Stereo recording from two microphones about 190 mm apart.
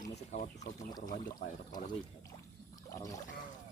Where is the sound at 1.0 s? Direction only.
45° left (ahead or behind).